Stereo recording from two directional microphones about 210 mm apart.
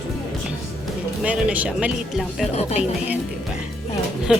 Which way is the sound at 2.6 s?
30° left (ahead or behind).